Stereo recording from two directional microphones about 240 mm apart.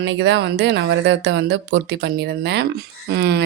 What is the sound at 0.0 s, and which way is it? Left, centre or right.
Speech, right.